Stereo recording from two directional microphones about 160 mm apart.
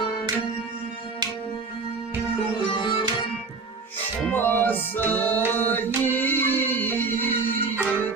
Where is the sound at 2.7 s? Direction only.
30° left (ahead or behind).